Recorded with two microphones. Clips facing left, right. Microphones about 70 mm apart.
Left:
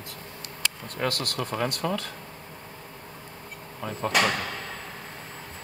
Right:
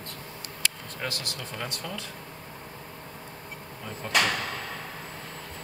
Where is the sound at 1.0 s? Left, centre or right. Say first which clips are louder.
Left 11 dB; left.